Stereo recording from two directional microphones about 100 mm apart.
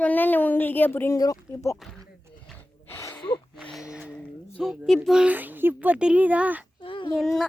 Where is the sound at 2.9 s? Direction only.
30° left (ahead or behind).